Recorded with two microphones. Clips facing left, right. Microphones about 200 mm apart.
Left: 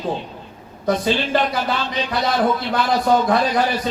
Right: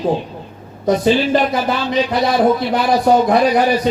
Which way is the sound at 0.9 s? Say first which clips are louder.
Right 6 dB; 20° right (ahead or behind).